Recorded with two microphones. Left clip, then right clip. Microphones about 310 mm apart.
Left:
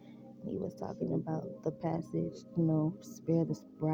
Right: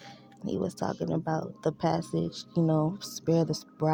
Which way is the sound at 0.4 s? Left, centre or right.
Right.